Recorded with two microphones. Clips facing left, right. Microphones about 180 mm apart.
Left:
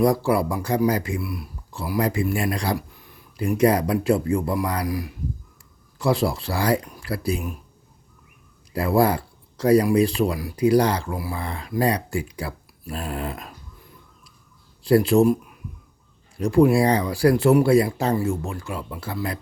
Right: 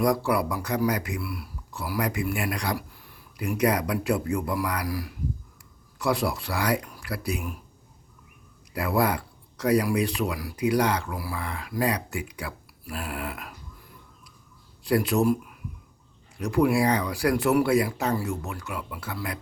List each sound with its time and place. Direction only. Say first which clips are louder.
0.0 s speech: left 4 dB; 25° left (ahead or behind)
8.7 s speech: left 5 dB; 30° left (ahead or behind)
14.8 s speech: left 6 dB; 30° left (ahead or behind)
16.4 s speech: left 5 dB; 30° left (ahead or behind)